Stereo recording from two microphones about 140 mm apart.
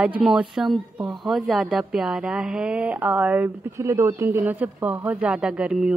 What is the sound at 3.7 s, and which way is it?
A woman's voice, 20° right (ahead or behind).